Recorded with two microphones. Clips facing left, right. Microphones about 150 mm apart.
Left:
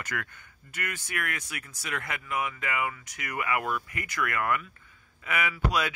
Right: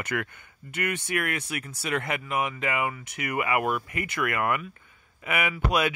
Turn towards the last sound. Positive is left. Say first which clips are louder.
# right 3 dB
turn(degrees=-20)  # may be behind; listen again after turning